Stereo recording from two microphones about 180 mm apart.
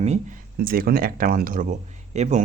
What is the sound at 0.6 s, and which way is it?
Speech, 55° right (ahead or behind).